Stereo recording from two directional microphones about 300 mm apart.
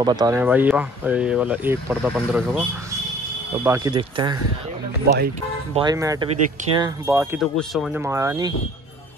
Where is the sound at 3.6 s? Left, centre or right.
Centre.